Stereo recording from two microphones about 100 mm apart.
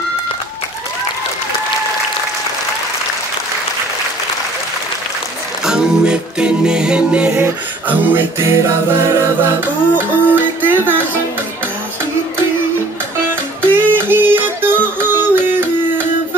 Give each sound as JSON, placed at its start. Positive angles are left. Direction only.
{"t": 5.7, "sound": "music", "side_deg": -10}
{"t": 13.7, "sound": "music", "side_deg": -20}